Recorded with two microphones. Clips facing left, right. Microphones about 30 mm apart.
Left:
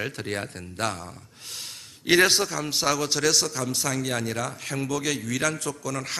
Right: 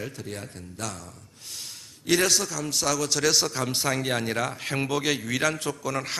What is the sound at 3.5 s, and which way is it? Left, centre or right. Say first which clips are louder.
A man's voice: right 1 dB; right.